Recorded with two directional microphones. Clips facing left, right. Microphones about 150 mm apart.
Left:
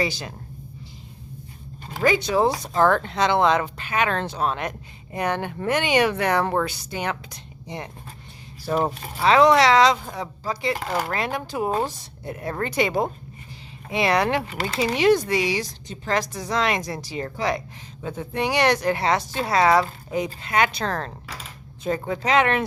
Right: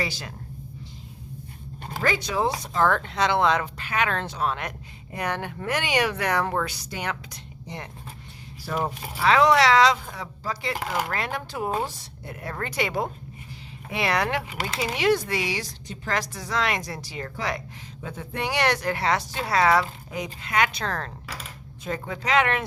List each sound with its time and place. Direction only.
0.0 s speech: 20° left (ahead or behind)
2.0 s speech: 25° left (ahead or behind)
8.6 s speech: 25° left (ahead or behind)